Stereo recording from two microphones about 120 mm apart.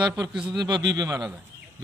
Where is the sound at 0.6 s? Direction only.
35° right (ahead or behind).